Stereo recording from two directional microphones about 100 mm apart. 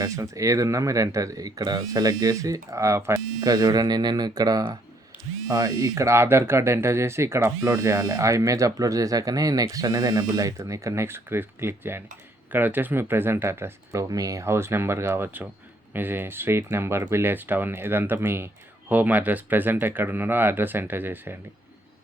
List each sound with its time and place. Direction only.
0.0 s speech: 35° right (ahead or behind)
14.0 s speech: 35° right (ahead or behind); by 21.3 s 20° right (ahead or behind)